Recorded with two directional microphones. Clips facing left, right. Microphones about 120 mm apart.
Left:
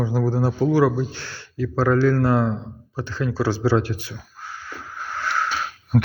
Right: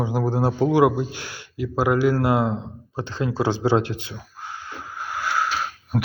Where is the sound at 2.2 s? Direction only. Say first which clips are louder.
Left 1 dB; 15° right (ahead or behind).